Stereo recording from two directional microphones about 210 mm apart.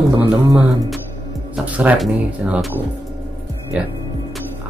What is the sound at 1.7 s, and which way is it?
Speech, 5° right (ahead or behind).